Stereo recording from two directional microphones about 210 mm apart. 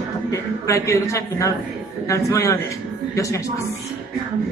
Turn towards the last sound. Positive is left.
turn(degrees=15)  # may be behind; listen again after turning